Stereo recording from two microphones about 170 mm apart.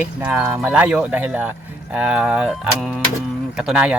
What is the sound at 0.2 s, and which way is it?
Speech, 10° right (ahead or behind).